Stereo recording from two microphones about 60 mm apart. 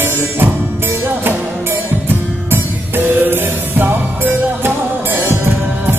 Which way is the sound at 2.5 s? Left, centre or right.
Right.